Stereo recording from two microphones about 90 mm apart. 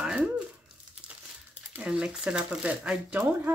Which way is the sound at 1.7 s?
10° right (ahead or behind).